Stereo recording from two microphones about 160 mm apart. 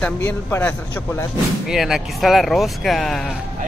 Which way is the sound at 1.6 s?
5° right (ahead or behind).